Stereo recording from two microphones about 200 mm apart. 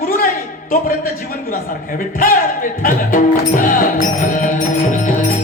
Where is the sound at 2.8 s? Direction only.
45° left (ahead or behind).